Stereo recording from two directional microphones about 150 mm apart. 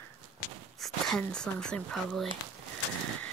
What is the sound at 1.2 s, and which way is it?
Speech, 5° left (ahead or behind).